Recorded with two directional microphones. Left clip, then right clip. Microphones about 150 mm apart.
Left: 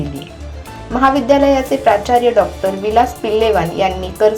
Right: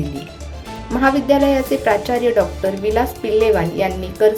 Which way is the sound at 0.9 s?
25° right (ahead or behind).